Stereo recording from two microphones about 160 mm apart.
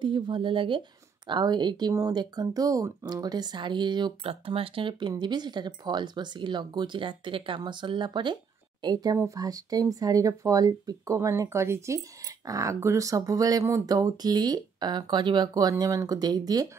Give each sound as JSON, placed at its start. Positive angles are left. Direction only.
{"t": 0.0, "sound": "a woman's voice", "side_deg": -30}